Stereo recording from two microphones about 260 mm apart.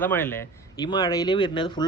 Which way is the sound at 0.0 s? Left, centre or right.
Centre.